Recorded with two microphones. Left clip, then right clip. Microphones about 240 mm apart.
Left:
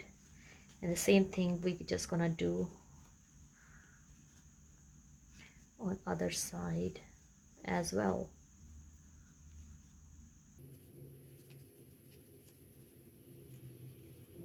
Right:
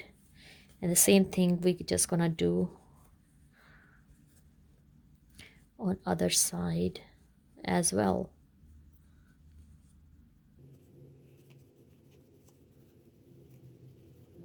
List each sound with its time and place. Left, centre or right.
0.4 s a woman's voice: right
5.4 s speech: right